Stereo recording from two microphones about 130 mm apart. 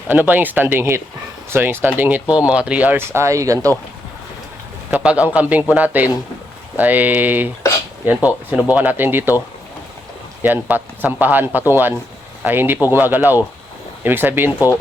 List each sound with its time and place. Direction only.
0.1 s speech: 15° right (ahead or behind)
4.9 s speech: 10° right (ahead or behind)
10.4 s speech: 15° right (ahead or behind)